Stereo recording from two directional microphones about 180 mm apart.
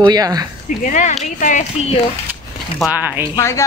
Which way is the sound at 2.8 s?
10° right (ahead or behind).